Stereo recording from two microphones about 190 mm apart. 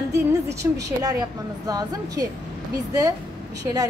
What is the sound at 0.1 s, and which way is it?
A woman's voice, 15° right (ahead or behind).